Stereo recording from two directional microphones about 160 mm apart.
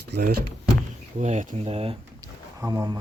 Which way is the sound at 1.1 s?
45° right (ahead or behind).